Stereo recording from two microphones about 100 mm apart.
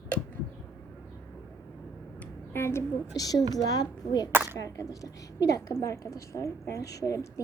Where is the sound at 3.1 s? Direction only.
40° left (ahead or behind).